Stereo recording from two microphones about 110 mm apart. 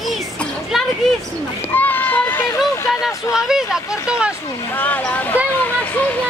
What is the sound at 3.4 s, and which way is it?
Speech, 5° right (ahead or behind).